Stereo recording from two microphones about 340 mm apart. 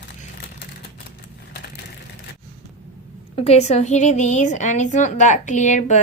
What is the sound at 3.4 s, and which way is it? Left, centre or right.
A woman's voice, centre.